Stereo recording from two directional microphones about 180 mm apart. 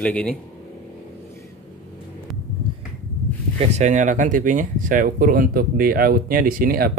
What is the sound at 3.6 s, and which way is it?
Speech, 40° right (ahead or behind).